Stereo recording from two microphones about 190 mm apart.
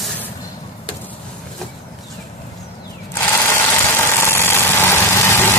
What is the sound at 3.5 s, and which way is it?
Vehicle, 15° left (ahead or behind).